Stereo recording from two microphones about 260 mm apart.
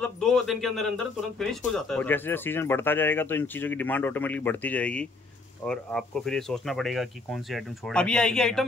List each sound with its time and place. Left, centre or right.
0.0 s speech: centre